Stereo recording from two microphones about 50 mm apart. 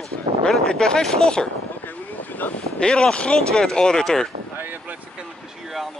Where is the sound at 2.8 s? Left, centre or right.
Centre.